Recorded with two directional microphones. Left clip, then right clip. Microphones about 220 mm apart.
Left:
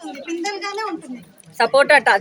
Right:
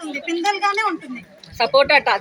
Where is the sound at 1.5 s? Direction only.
30° left (ahead or behind).